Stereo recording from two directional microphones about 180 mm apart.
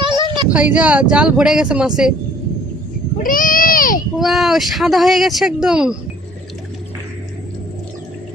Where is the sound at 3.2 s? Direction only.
50° left (ahead or behind).